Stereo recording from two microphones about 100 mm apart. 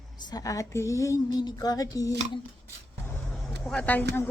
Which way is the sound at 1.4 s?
45° left (ahead or behind).